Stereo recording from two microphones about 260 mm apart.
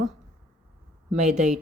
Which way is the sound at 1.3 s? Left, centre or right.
Centre.